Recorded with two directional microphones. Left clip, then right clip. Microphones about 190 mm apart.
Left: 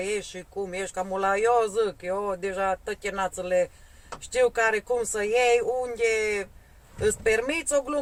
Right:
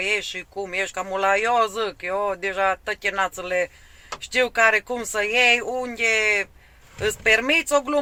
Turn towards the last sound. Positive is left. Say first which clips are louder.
# right 6 dB
turn(degrees=-15)  # may be behind; listen again after turning